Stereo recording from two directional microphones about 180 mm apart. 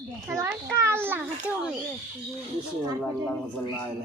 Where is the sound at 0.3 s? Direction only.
15° right (ahead or behind).